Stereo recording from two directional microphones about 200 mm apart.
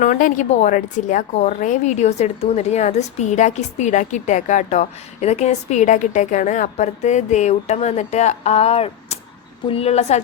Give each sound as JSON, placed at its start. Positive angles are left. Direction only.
{"t": 0.0, "sound": "a woman's voice", "side_deg": 40}